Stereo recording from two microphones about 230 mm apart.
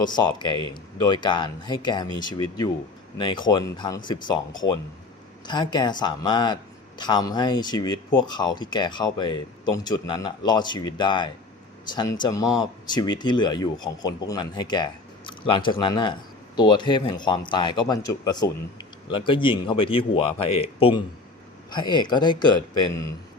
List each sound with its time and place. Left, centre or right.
0.0 s speech: centre